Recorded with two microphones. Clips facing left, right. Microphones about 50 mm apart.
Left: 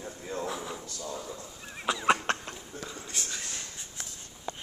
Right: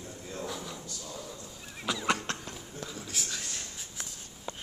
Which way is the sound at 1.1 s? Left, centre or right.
Centre.